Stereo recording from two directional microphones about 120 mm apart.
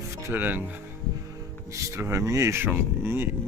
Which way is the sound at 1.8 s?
20° right (ahead or behind).